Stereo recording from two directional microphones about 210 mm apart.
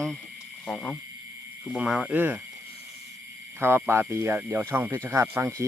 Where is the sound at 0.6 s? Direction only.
5° left (ahead or behind); by 2.4 s 10° right (ahead or behind).